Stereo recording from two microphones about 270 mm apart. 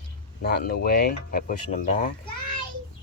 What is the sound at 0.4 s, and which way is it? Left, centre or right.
Speech, left.